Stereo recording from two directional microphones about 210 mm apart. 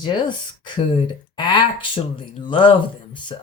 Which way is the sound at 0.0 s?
20° left (ahead or behind).